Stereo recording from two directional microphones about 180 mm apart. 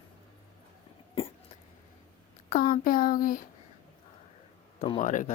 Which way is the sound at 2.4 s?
45° left (ahead or behind).